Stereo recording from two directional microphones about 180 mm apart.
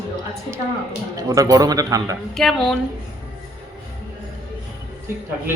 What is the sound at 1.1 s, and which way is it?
A man's voice, 20° right (ahead or behind).